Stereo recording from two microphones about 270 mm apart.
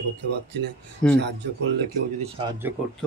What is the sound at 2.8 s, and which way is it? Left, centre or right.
Speech, centre.